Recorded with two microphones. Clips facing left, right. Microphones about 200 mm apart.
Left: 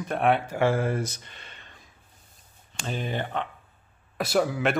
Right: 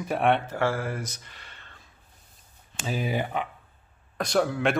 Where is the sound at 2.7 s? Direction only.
5° right (ahead or behind).